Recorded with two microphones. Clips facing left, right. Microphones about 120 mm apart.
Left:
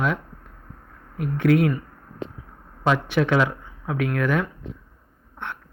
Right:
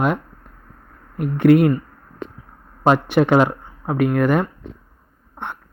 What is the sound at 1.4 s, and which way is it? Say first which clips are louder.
Speech: right 6 dB; 60° right (ahead or behind).